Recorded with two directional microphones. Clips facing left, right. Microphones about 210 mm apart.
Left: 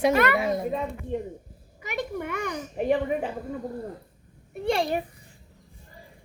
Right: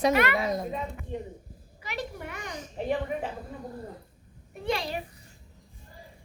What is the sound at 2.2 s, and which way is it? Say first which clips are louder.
Speech: left 8 dB; 60° left (ahead or behind).